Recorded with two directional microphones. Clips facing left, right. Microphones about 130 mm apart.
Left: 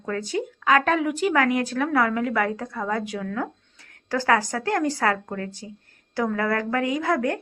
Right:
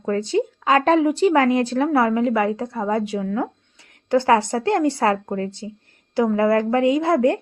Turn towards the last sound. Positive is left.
turn(degrees=-25)  # may be behind; listen again after turning